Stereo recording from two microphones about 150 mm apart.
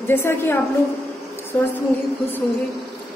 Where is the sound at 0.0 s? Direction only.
15° left (ahead or behind).